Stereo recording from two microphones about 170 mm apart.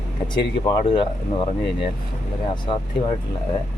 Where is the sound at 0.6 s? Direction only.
30° left (ahead or behind).